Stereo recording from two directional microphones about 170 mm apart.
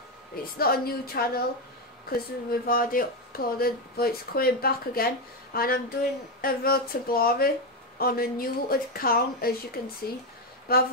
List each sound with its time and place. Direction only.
0.6 s speech: 65° left (ahead or behind)